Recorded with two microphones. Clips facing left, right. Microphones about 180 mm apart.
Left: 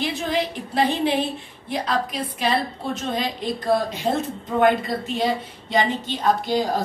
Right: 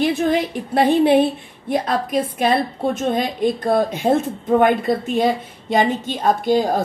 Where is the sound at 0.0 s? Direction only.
50° right (ahead or behind).